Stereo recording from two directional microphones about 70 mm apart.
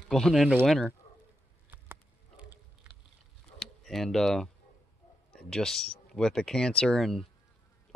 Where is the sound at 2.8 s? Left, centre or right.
Centre.